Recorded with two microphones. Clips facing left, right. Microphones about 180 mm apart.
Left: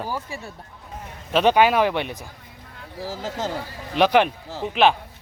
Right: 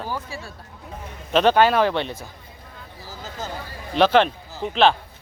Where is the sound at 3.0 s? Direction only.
90° left.